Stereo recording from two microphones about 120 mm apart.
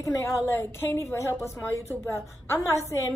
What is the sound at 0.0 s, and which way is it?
A woman's voice, 25° left (ahead or behind).